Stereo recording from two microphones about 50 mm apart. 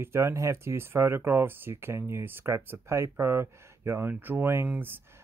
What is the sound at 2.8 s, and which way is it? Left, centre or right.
Speech, right.